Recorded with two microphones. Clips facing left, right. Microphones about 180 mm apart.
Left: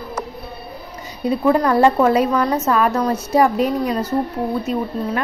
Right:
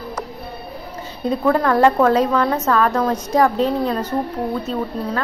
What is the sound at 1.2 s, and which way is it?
A woman's voice, 10° left (ahead or behind).